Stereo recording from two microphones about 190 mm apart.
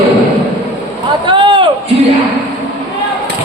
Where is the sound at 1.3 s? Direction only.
25° right (ahead or behind).